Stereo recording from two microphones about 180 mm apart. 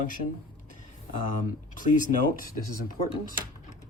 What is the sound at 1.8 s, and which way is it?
Speech, 45° left (ahead or behind).